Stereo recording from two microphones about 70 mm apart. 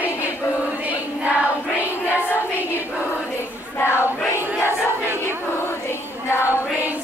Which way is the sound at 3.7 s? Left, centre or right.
Left.